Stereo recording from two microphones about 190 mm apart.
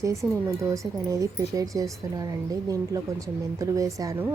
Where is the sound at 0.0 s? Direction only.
15° right (ahead or behind).